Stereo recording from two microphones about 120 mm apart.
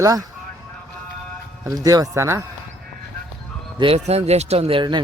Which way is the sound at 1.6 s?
30° right (ahead or behind).